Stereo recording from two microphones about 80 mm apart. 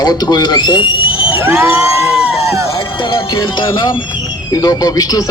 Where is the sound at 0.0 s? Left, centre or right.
Left.